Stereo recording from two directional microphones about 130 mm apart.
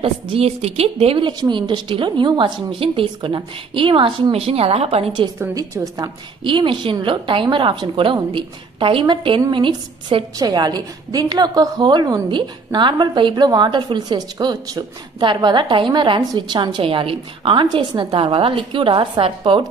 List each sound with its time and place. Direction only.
0.0 s a woman's voice: 50° right (ahead or behind)
5.5 s a woman's voice: 30° right (ahead or behind)